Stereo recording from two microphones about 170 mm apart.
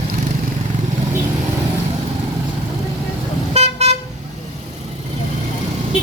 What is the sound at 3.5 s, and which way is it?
Vehicle, 40° right (ahead or behind).